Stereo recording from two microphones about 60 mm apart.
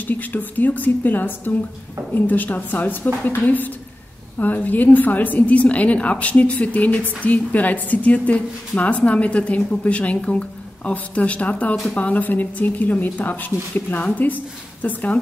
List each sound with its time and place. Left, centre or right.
0.1 s a woman's voice: left